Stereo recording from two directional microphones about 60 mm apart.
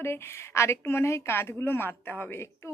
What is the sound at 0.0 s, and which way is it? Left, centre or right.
A woman's voice, left.